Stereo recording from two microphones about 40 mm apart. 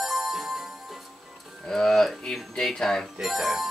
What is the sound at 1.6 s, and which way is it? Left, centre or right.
Speech, centre.